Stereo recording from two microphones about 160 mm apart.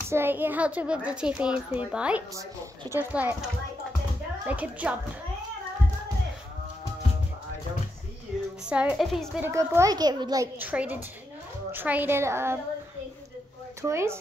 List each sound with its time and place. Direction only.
0.1 s a child's voice: 15° right (ahead or behind)
4.5 s a child's voice: 10° right (ahead or behind)
8.6 s a woman's voice: 5° right (ahead or behind)
9.4 s a child's voice: 20° right (ahead or behind)
10.6 s a child's voice: 10° right (ahead or behind)
13.8 s a child's voice: 15° right (ahead or behind)